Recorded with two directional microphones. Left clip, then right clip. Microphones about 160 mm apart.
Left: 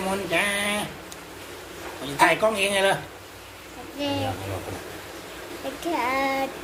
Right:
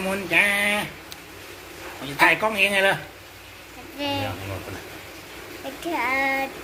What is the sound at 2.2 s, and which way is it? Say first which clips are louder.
Speech: right 1 dB; 35° right (ahead or behind).